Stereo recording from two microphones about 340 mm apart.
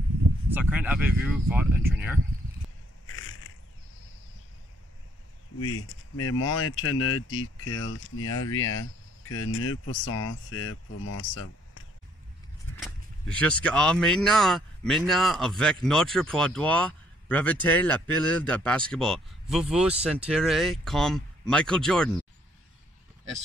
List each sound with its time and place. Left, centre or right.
0.5 s speech: centre
3.1 s a sound: left
5.7 s speech: left
12.8 s speech: centre